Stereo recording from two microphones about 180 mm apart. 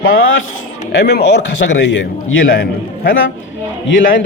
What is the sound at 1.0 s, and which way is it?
Speech, 65° left (ahead or behind).